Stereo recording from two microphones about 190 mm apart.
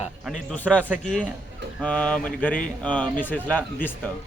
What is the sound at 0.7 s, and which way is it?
Speech, 10° right (ahead or behind).